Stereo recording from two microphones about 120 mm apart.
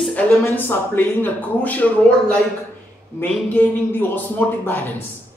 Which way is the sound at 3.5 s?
15° left (ahead or behind).